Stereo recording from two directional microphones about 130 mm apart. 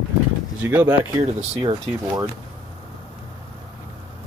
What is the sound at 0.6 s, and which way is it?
Speech, 15° right (ahead or behind).